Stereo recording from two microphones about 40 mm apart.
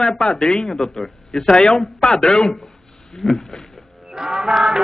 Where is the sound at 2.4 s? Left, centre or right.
Centre.